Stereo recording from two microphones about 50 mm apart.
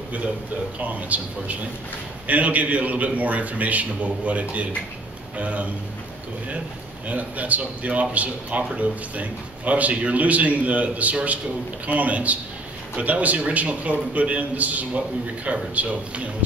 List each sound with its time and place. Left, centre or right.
0.7 s a man's voice: right
7.1 s speech: right